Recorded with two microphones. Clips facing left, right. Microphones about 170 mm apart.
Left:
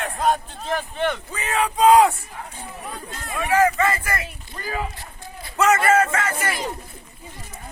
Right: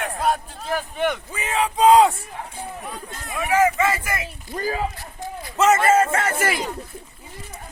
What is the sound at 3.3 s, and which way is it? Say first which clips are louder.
Speech: even; 15° right (ahead or behind).